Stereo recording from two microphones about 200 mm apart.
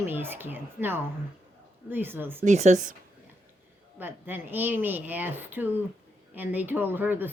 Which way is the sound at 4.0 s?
10° right (ahead or behind).